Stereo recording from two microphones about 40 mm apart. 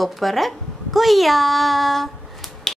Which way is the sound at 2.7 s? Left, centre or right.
Centre.